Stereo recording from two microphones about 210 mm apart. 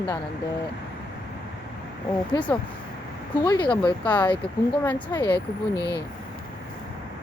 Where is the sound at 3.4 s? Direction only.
20° left (ahead or behind).